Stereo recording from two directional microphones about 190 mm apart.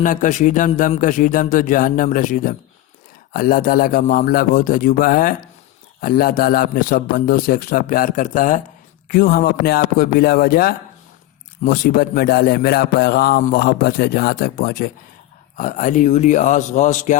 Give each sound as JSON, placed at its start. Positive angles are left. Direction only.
{"t": 0.0, "sound": "a man's voice", "side_deg": 45}